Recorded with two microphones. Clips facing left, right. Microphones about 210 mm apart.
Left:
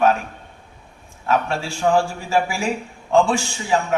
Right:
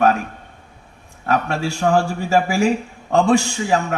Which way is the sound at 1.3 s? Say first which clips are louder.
Right 1 dB; 40° right (ahead or behind).